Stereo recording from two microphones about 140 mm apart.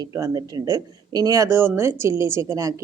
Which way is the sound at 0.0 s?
25° right (ahead or behind).